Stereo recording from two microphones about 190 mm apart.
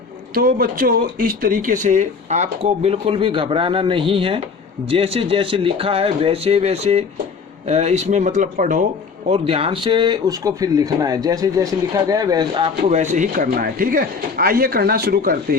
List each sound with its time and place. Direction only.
0.3 s speech: 50° right (ahead or behind)
9.5 s speech: 30° right (ahead or behind)
12.9 s speech: 40° right (ahead or behind)